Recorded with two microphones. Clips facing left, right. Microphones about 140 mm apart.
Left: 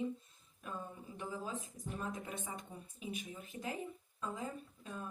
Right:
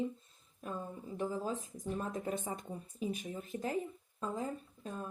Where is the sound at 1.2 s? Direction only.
40° right (ahead or behind).